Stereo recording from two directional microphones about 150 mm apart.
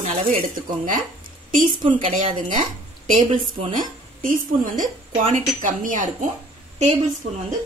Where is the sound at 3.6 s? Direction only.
60° right (ahead or behind).